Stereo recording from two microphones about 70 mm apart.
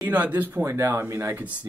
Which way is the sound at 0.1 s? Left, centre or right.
Right.